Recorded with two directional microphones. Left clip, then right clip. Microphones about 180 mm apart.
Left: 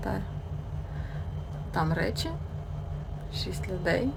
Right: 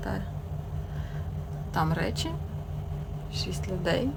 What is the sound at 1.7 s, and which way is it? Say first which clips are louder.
Speech: even; 5° right (ahead or behind).